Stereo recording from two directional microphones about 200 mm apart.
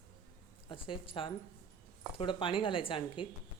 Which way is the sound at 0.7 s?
25° left (ahead or behind).